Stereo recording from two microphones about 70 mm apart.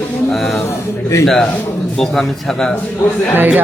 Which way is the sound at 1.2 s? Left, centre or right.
Centre.